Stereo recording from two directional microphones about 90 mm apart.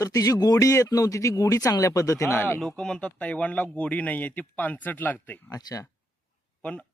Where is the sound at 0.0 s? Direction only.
40° left (ahead or behind).